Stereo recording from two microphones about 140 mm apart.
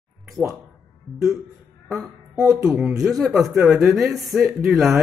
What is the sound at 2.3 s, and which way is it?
Speech, 25° right (ahead or behind).